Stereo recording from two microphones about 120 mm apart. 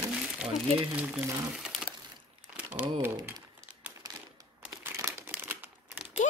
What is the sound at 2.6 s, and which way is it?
Speech, 10° right (ahead or behind).